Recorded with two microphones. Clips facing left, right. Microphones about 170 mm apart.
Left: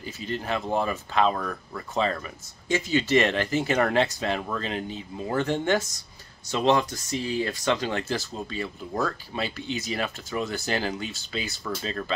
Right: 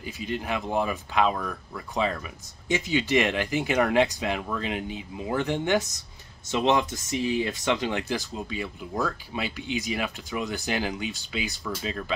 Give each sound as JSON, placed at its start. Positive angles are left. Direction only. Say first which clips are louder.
{"t": 0.0, "sound": "speech", "louder": "even", "side_deg": -10}